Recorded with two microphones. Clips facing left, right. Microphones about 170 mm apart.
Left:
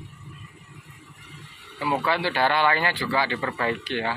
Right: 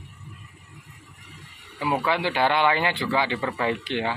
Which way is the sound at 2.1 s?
15° right (ahead or behind).